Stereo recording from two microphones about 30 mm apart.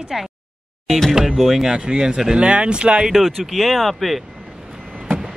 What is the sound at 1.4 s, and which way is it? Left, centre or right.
Speech, centre.